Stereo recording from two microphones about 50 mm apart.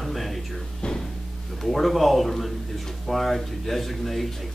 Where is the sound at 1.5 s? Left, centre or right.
Centre.